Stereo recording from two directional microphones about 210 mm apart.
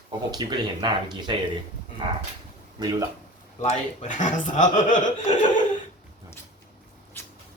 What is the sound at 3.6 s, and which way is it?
Speech, 35° left (ahead or behind).